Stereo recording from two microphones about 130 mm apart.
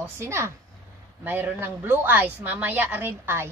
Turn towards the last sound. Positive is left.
turn(degrees=-20)  # may be behind; listen again after turning